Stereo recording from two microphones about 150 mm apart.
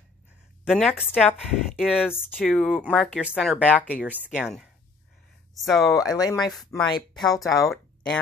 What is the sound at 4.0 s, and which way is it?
Speech, 10° right (ahead or behind).